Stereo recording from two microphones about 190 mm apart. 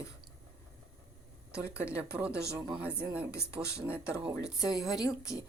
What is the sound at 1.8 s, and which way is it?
A woman's voice, 10° right (ahead or behind).